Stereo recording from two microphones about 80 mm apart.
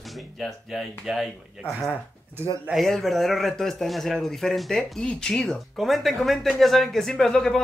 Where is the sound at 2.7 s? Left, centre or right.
Centre.